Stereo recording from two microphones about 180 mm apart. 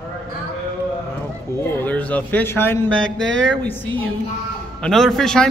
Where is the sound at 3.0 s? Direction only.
90° right.